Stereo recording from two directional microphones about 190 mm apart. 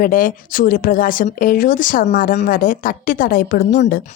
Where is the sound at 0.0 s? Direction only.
45° left (ahead or behind).